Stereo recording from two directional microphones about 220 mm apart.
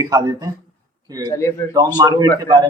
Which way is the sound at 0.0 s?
15° right (ahead or behind).